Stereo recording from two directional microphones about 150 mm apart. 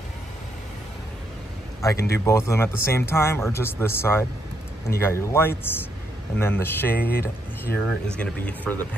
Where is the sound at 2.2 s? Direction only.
20° left (ahead or behind).